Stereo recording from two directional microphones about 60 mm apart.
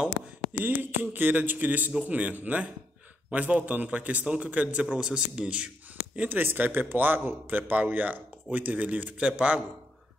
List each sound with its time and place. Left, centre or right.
0.6 s a man's voice: right; by 5.7 s centre
6.1 s a man's voice: right